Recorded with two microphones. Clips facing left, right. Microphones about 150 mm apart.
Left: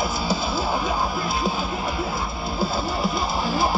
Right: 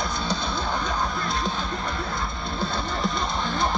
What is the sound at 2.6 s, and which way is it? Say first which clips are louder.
Music: left 3 dB; 5° left (ahead or behind).